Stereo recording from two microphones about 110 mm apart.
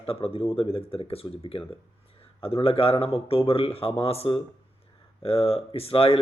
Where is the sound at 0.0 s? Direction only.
60° left (ahead or behind).